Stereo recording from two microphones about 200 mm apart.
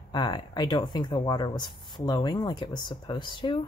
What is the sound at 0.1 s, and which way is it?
Speech, 20° left (ahead or behind).